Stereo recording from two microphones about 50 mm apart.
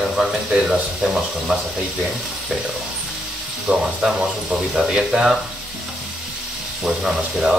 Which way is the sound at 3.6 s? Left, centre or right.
Centre.